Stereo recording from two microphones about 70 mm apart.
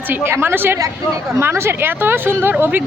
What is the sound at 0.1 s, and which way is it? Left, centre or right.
Speech, right.